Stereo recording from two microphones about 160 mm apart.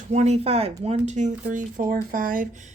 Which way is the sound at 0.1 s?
45° right (ahead or behind).